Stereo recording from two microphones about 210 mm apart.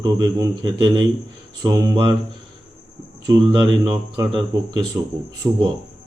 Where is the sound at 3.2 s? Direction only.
20° right (ahead or behind).